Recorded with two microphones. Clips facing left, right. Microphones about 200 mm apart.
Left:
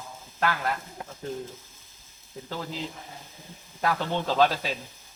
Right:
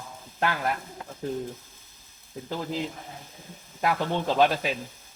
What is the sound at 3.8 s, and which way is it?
Speech, 15° right (ahead or behind).